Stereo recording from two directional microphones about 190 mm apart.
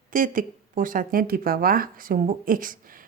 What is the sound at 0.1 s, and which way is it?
A woman's voice, 45° right (ahead or behind).